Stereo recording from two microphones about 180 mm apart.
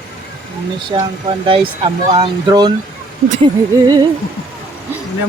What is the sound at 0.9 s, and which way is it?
Speech, 30° right (ahead or behind).